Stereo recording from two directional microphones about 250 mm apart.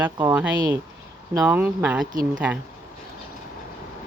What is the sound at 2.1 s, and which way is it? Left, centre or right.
Speech, right.